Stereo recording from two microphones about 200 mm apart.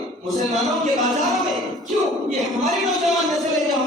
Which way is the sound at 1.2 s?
Centre (ahead or behind).